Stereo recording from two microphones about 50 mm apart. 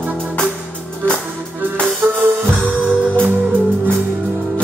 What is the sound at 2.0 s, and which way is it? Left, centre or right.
Music, right.